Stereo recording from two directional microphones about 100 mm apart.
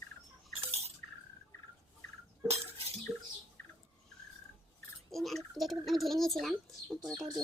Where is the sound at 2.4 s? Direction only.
90° right.